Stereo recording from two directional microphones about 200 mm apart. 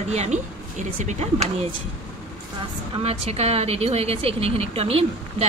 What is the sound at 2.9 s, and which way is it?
A woman's voice, 30° right (ahead or behind).